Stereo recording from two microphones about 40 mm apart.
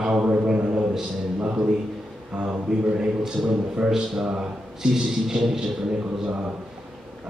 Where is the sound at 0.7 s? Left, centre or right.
Centre.